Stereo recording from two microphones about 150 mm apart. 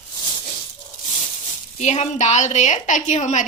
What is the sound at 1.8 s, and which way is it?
A woman's voice, 50° left (ahead or behind).